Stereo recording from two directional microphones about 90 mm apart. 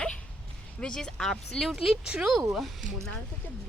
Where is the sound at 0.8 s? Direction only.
10° left (ahead or behind).